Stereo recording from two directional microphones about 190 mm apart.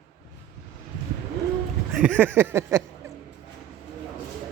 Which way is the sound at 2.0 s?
10° right (ahead or behind).